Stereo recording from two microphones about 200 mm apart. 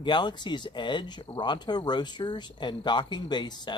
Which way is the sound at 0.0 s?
20° left (ahead or behind).